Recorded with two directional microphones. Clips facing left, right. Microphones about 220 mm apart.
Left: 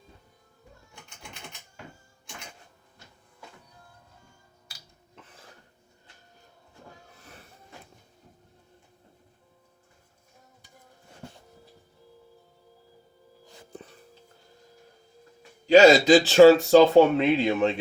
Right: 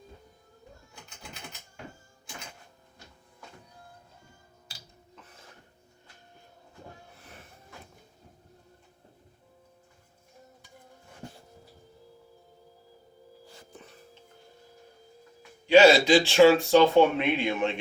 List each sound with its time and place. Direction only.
15.6 s speech: 40° left (ahead or behind)